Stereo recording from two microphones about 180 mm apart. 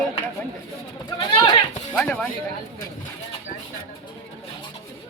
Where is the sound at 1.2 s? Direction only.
25° left (ahead or behind).